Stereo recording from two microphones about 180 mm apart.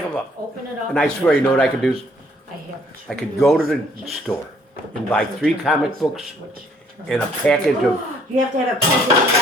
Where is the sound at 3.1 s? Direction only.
Centre (ahead or behind).